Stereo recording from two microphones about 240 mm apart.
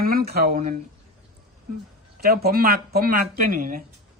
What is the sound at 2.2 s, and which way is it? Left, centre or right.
Speech, right.